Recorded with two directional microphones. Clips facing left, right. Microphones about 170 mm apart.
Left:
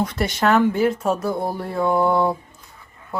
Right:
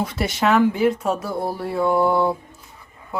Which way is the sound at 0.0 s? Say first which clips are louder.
Left 1 dB; 5° right (ahead or behind).